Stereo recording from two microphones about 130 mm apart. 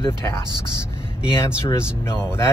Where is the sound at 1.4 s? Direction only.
20° left (ahead or behind).